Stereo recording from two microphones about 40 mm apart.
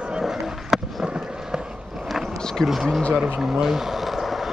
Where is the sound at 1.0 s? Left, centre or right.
Right.